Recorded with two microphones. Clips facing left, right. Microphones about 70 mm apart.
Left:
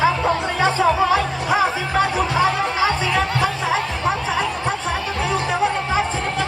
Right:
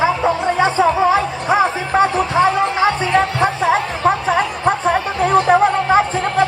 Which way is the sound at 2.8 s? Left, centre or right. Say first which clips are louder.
Right 3 dB; right.